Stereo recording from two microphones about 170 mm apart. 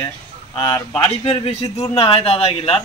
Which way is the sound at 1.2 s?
35° left (ahead or behind).